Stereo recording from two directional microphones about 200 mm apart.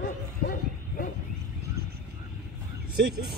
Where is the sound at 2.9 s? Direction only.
55° right (ahead or behind).